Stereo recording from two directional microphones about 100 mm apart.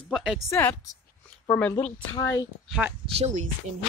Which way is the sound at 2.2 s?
35° left (ahead or behind).